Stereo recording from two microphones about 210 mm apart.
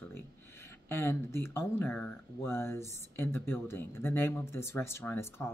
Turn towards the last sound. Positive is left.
turn(degrees=10)  # may be behind; listen again after turning